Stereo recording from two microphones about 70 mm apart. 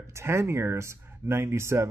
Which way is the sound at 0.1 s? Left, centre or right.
Right.